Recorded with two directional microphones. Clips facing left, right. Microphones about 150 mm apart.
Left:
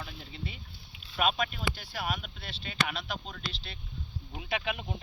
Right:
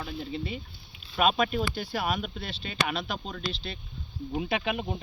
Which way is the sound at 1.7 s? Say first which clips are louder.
Right 6 dB; 65° right (ahead or behind).